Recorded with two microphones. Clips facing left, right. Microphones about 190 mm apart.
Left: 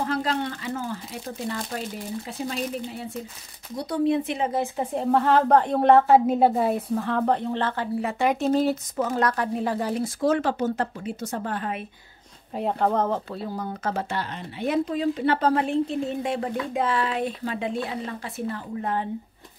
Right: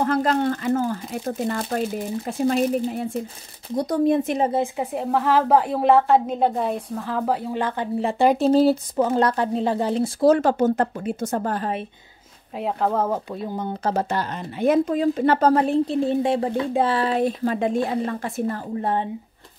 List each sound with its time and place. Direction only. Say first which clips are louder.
0.0 s speech: right 6 dB; 50° right (ahead or behind)
4.9 s a woman's voice: even; 5° right (ahead or behind); by 11.8 s 40° right (ahead or behind)
12.5 s speech: right 1 dB; centre (ahead or behind)
13.8 s speech: right 6 dB; 40° right (ahead or behind)